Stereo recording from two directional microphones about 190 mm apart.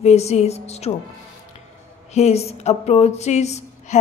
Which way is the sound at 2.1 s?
35° left (ahead or behind).